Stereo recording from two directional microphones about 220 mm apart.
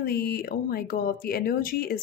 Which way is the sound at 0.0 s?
45° left (ahead or behind).